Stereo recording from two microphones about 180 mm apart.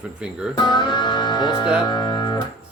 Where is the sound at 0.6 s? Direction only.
25° left (ahead or behind).